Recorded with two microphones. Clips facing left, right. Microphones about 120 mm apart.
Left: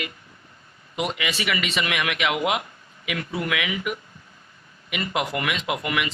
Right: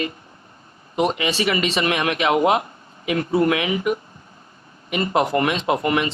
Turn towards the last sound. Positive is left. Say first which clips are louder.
# right 6 dB
turn(degrees=-35)  # may be behind; listen again after turning